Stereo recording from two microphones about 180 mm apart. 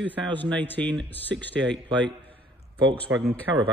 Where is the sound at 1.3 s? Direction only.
75° right (ahead or behind).